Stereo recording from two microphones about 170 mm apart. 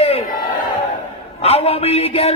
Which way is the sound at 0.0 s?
35° left (ahead or behind).